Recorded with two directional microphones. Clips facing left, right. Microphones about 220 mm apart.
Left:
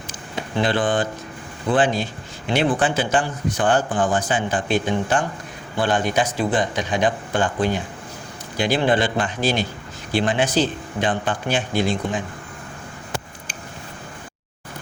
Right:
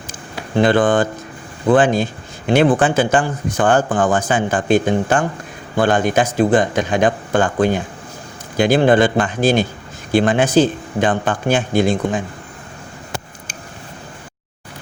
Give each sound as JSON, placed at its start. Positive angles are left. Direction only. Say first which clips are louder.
{"t": 0.5, "sound": "speech", "louder": "right 7 dB", "side_deg": -50}